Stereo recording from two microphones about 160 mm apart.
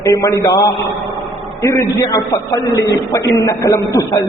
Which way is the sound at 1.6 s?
20° left (ahead or behind).